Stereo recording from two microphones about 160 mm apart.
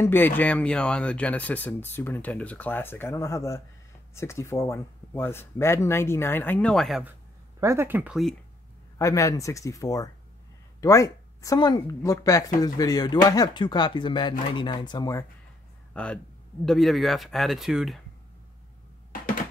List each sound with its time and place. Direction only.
0.0 s speech: 10° left (ahead or behind); by 7.2 s 5° right (ahead or behind)
7.6 s speech: 15° right (ahead or behind)
8.9 s speech: 20° left (ahead or behind)
15.9 s a man's voice: 5° left (ahead or behind)